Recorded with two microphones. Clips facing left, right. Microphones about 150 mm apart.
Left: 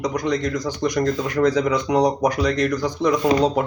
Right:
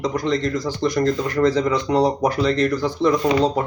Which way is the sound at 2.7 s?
15° left (ahead or behind).